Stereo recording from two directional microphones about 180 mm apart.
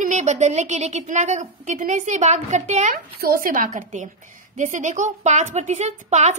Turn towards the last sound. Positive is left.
turn(degrees=-40)  # may be behind; listen again after turning